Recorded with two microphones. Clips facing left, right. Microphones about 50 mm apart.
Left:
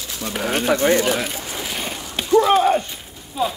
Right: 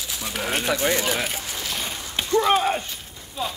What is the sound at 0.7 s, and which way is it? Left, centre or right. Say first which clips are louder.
Speech: left 7 dB; left.